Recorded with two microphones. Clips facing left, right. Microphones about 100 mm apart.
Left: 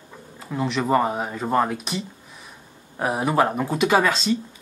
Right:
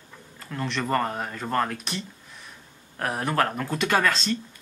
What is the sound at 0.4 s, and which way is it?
Speech, 10° left (ahead or behind).